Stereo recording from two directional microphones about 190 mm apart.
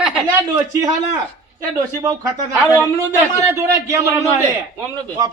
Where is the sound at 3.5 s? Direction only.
15° right (ahead or behind).